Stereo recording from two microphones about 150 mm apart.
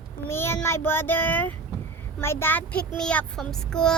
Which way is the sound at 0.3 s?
15° left (ahead or behind).